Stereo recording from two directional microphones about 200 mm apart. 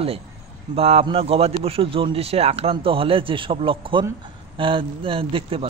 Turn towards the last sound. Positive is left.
turn(degrees=-30)  # may be behind; listen again after turning